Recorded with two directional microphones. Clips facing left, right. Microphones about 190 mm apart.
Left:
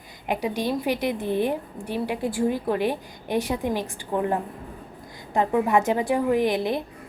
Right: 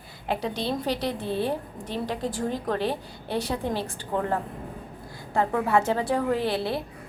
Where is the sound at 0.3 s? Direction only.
15° left (ahead or behind).